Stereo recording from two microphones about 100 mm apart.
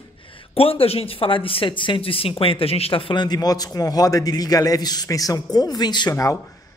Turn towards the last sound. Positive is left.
turn(degrees=45)  # may be behind; listen again after turning